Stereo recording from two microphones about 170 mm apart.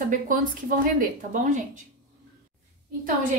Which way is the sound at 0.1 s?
55° right (ahead or behind).